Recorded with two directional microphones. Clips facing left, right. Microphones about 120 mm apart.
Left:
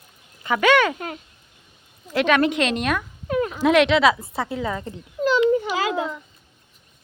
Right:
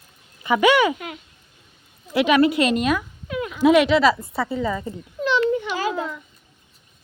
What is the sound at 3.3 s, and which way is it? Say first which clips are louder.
Dog: left 3 dB; 40° left (ahead or behind).